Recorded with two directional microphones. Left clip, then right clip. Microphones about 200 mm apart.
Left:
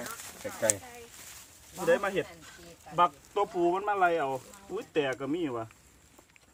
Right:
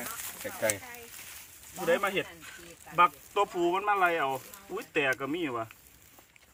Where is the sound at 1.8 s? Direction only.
20° left (ahead or behind).